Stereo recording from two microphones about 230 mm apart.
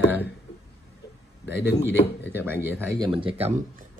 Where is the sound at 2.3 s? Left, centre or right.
Centre.